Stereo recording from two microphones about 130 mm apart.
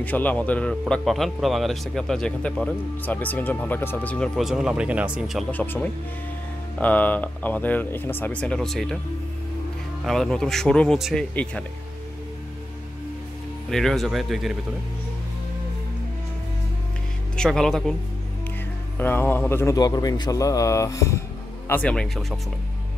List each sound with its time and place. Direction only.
0.0 s speech: 10° left (ahead or behind)
4.4 s speech: 5° right (ahead or behind)
5.5 s speech: 15° left (ahead or behind)
10.0 s speech: 5° left (ahead or behind)
13.7 s speech: 5° left (ahead or behind)
17.4 s speech: 5° left (ahead or behind)
18.9 s a man's voice: 15° left (ahead or behind)
21.6 s speech: 10° left (ahead or behind)